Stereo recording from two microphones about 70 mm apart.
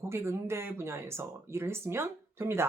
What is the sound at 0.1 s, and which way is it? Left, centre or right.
Speech, right.